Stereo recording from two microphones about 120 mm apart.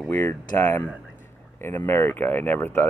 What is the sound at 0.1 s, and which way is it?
Speech, 15° left (ahead or behind).